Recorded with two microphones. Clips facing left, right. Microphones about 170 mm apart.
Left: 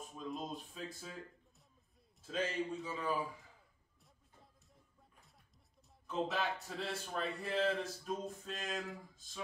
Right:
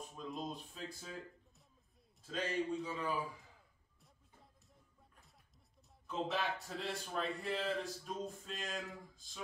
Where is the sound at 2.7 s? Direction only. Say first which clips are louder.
Even; centre (ahead or behind).